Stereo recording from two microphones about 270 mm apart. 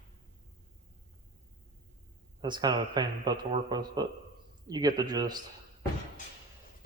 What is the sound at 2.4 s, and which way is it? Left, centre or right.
Speech, centre.